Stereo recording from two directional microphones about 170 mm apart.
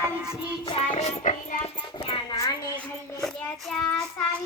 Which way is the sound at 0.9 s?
45° left (ahead or behind).